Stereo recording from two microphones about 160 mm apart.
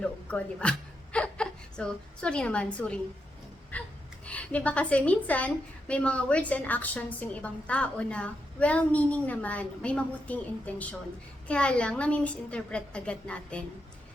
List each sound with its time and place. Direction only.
0.0 s a sound: 5° left (ahead or behind)
3.7 s gasp: 10° left (ahead or behind)
4.3 s a woman's voice: 10° left (ahead or behind)